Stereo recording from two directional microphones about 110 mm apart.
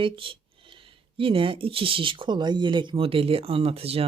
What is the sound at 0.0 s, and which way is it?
Speech, 50° right (ahead or behind).